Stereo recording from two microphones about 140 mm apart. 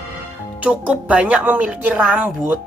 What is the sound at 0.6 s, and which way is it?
Speech, 10° right (ahead or behind).